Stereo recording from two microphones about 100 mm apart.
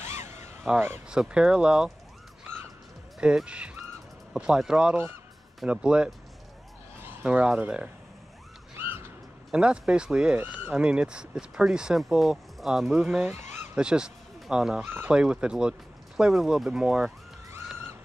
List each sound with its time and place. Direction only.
0.7 s speech: 20° right (ahead or behind)
1.0 s speech: 10° right (ahead or behind)
3.2 s speech: 10° right (ahead or behind)
7.2 s speech: 10° right (ahead or behind)
8.7 s a sound: 20° right (ahead or behind)
9.5 s speech: 10° right (ahead or behind)
13.2 s speech: 25° right (ahead or behind)
13.7 s speech: 10° right (ahead or behind)
14.9 s speech: 20° right (ahead or behind)
15.1 s speech: 10° right (ahead or behind)